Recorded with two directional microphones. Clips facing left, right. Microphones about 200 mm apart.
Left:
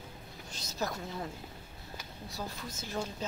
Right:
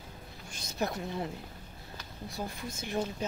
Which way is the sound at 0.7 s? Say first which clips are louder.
Right 3 dB; 20° right (ahead or behind).